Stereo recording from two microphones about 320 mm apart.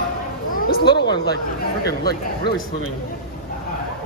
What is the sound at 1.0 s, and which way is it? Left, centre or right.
Speech, left.